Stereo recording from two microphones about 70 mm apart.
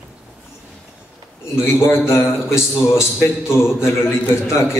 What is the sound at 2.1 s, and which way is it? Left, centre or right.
A man's voice, left.